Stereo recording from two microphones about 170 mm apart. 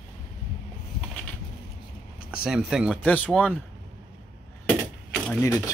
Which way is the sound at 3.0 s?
10° left (ahead or behind).